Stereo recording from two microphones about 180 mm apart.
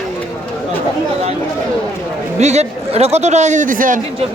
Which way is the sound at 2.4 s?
35° right (ahead or behind).